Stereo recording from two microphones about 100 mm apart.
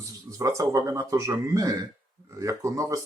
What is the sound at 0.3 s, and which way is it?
Speech, 35° right (ahead or behind).